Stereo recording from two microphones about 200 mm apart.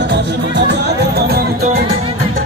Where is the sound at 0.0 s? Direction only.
60° right (ahead or behind).